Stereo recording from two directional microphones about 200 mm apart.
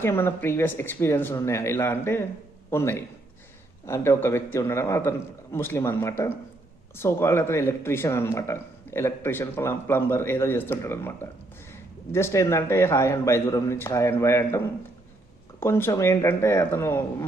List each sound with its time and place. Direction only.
0.0 s a man's voice: 10° left (ahead or behind)
15.6 s speech: 10° left (ahead or behind)